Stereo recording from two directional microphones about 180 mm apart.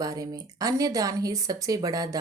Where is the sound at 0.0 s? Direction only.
20° right (ahead or behind).